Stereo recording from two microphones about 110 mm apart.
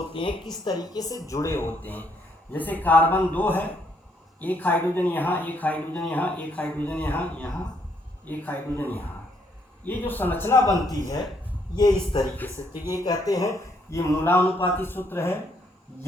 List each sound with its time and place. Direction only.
0.1 s a woman's voice: 50° left (ahead or behind)
0.5 s a woman's voice: 40° left (ahead or behind); by 10.6 s 20° left (ahead or behind)
11.8 s a woman's voice: 40° left (ahead or behind)
12.7 s speech: 20° right (ahead or behind)
13.0 s a man's voice: 35° left (ahead or behind)